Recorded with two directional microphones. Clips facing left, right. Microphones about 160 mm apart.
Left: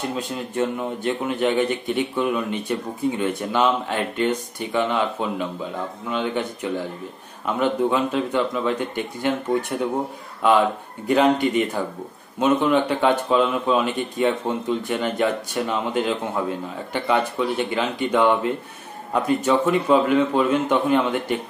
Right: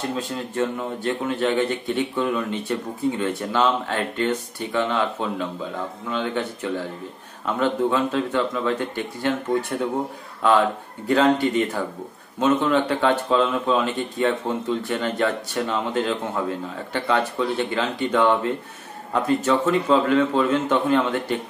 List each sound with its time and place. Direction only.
0.1 s a man's voice: 15° left (ahead or behind)